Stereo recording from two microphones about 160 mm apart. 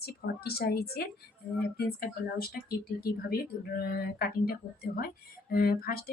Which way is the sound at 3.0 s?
70° left (ahead or behind).